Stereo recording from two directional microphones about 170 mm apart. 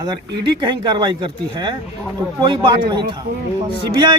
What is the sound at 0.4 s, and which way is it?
Speech, 25° right (ahead or behind).